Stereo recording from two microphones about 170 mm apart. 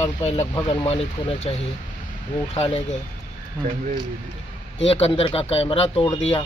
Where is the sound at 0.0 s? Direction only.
40° left (ahead or behind).